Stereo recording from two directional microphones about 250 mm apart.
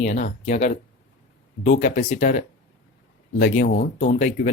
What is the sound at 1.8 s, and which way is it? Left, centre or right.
Speech, left.